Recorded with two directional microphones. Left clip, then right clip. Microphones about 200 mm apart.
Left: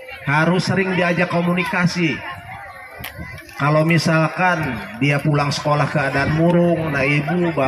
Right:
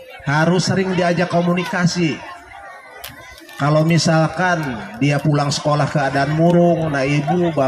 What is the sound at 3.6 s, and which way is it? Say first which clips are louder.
A man's voice: even; 60° right (ahead or behind).